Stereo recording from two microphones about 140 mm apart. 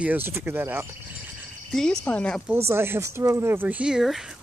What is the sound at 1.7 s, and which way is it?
Speech, 5° left (ahead or behind).